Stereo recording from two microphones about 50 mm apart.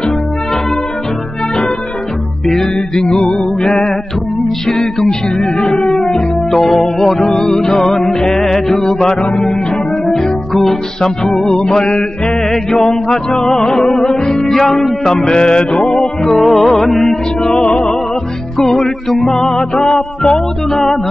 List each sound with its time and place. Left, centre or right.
2.4 s music: centre
4.6 s music: centre
17.4 s music: centre